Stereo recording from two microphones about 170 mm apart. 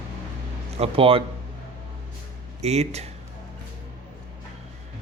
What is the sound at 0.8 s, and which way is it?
Speech, 35° right (ahead or behind).